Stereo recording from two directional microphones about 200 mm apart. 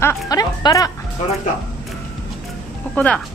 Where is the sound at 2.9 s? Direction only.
5° left (ahead or behind).